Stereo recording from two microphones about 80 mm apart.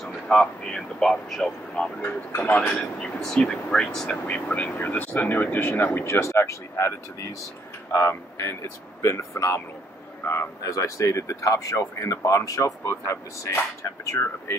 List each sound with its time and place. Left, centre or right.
0.0 s speech: centre
2.0 s speech: left
3.2 s speech: centre
4.5 s speech: centre
10.6 s speech: left